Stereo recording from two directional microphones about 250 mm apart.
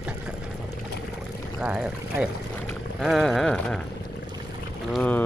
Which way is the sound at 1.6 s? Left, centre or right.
Centre.